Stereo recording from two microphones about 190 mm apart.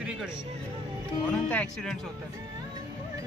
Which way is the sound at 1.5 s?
5° left (ahead or behind).